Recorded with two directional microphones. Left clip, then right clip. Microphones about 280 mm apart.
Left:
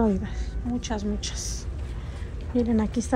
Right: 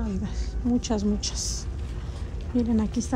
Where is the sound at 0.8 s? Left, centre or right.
Right.